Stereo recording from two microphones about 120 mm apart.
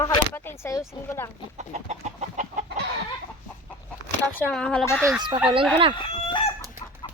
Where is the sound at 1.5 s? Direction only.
70° right (ahead or behind); by 2.6 s 90° right.